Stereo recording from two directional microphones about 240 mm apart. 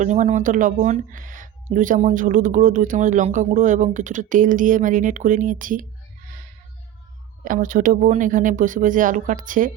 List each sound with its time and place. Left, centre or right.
0.0 s speech: right
7.4 s speech: right